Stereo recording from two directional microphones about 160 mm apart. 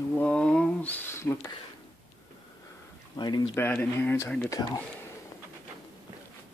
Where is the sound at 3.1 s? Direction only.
30° left (ahead or behind).